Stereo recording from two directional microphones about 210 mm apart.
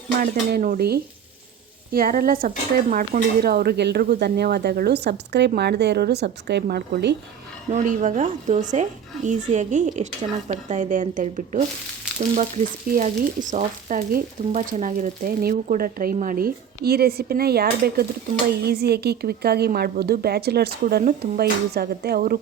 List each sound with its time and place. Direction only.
0.2 s frying: 45° right (ahead or behind)
7.7 s speech: 35° right (ahead or behind)
12.1 s frying: 5° right (ahead or behind)
12.9 s frying: 35° right (ahead or behind)